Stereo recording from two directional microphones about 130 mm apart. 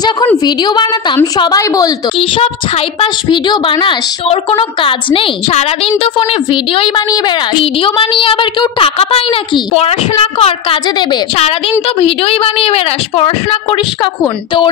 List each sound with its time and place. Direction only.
1.2 s a woman's voice: 30° left (ahead or behind)
2.1 s a woman's voice: 45° left (ahead or behind)